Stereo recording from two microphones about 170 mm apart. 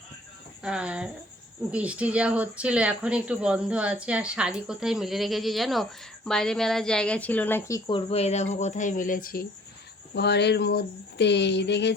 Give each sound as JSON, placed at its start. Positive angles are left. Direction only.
{"t": 0.6, "sound": "speech", "side_deg": -5}
{"t": 7.9, "sound": "speech", "side_deg": 35}
{"t": 10.2, "sound": "speech", "side_deg": 80}